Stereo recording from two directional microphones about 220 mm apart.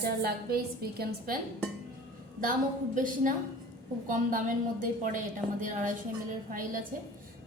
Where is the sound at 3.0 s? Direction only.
35° right (ahead or behind).